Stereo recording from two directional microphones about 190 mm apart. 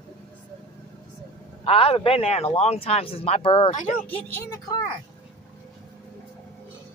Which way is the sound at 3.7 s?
40° left (ahead or behind).